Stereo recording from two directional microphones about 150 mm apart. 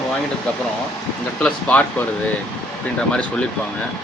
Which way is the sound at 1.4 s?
5° left (ahead or behind).